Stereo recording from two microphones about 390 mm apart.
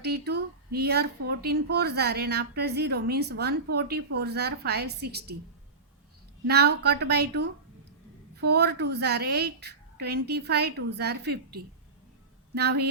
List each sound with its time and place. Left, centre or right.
0.0 s speech: right
6.5 s speech: right